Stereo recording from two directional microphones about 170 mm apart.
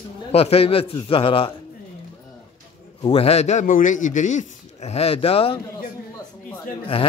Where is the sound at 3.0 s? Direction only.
35° left (ahead or behind).